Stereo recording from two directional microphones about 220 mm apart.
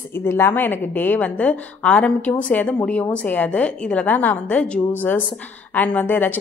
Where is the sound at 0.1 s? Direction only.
10° left (ahead or behind).